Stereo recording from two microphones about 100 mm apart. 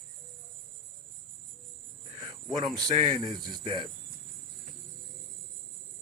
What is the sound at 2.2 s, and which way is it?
A man's voice, 40° right (ahead or behind).